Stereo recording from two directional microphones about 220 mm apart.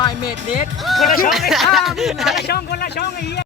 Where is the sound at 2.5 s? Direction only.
45° left (ahead or behind).